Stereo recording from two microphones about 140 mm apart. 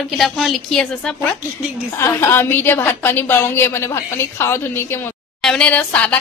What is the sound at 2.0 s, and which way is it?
Speech, 20° left (ahead or behind).